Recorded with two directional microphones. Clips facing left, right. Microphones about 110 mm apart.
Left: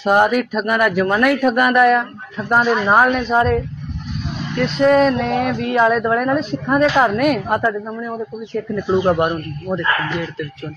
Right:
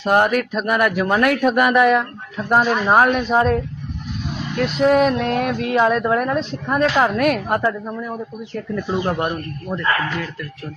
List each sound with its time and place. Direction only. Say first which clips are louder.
0.0 s speech: left 2 dB; 5° left (ahead or behind)
9.0 s speech: left 6 dB; 15° left (ahead or behind)